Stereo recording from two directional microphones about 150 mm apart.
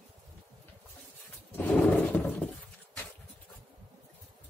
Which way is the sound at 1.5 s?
10° left (ahead or behind).